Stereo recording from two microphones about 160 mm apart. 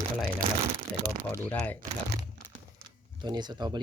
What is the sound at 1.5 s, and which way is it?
Speech, 10° left (ahead or behind).